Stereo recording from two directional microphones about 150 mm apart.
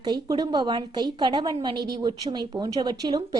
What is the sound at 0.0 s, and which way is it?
A woman's voice, 30° right (ahead or behind).